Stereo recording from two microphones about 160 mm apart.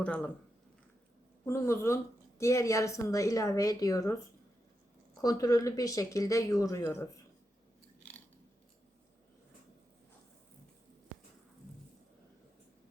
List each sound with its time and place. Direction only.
0.0 s speech: 5° left (ahead or behind)
1.5 s speech: 15° left (ahead or behind)
5.2 s speech: 20° left (ahead or behind)